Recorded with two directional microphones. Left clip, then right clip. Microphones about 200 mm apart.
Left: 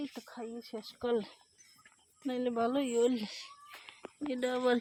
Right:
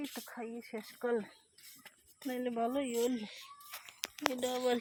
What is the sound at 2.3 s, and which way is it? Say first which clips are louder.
Speech: left 3 dB; 25° left (ahead or behind).